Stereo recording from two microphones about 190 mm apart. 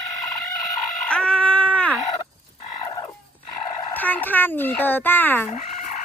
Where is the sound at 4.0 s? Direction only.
10° left (ahead or behind).